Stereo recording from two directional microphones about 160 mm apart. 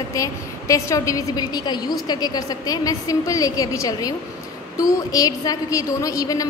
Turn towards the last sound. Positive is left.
turn(degrees=20)  # may be behind; listen again after turning